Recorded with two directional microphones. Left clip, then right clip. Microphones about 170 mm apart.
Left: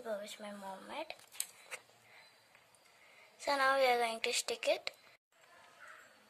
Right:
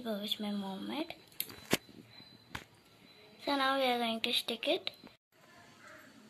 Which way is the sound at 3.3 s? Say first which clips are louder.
Left 1 dB; 15° left (ahead or behind).